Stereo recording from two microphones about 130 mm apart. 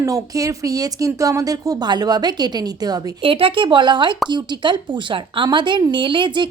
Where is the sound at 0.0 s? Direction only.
25° right (ahead or behind).